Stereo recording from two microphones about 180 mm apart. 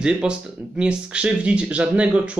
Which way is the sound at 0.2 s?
5° right (ahead or behind).